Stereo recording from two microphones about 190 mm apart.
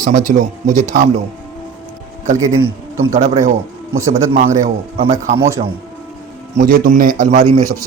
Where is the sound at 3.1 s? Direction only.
40° right (ahead or behind).